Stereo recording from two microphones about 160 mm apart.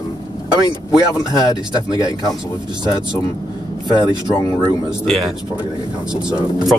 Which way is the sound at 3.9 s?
25° right (ahead or behind).